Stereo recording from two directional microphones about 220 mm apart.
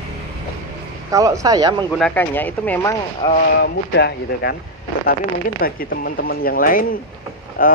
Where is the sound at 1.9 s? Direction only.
5° left (ahead or behind).